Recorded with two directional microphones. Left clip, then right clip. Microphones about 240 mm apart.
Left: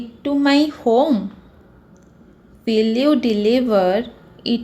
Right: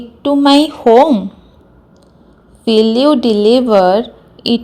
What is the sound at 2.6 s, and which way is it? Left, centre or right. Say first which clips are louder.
A woman's voice: right 7 dB; centre.